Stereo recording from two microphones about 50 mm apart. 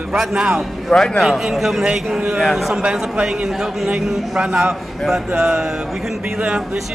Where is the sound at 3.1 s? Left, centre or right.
Right.